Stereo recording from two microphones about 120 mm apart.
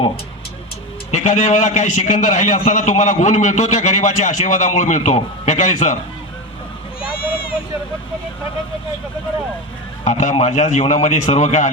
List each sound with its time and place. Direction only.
1.1 s a man's voice: 90° left
10.0 s a man's voice: 75° left (ahead or behind)